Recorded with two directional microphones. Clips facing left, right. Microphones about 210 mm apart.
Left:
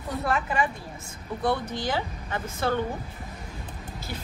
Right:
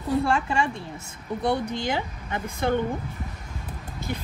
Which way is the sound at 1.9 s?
20° right (ahead or behind).